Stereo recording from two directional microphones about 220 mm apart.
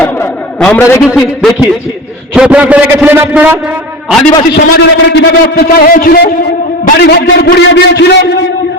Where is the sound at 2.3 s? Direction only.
5° right (ahead or behind).